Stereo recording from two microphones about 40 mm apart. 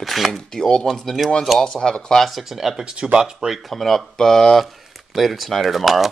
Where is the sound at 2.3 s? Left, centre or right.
Centre.